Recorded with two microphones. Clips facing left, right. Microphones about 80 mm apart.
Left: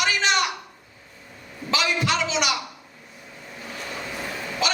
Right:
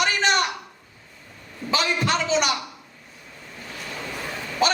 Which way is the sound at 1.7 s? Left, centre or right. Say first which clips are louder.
Right 1 dB; right.